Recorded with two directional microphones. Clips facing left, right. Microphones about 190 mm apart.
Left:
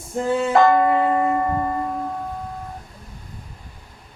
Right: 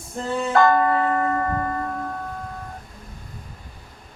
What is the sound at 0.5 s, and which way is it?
Church bell, 15° left (ahead or behind).